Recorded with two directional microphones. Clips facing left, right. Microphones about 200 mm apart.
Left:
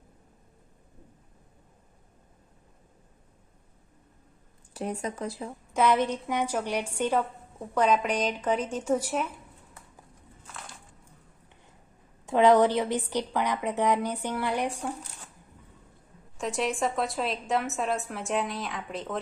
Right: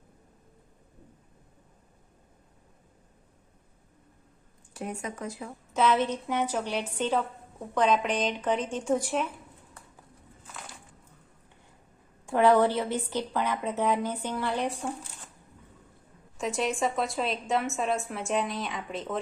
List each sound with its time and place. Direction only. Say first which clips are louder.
4.7 s speech: left 3 dB; 35° left (ahead or behind)
5.7 s a woman's voice: left 1 dB; 15° left (ahead or behind)
12.2 s a woman's voice: left 2 dB; 20° left (ahead or behind)
16.4 s a woman's voice: even; centre (ahead or behind)